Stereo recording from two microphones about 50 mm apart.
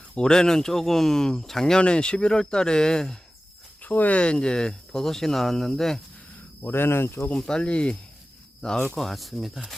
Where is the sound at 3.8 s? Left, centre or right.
Left; by 6.0 s centre.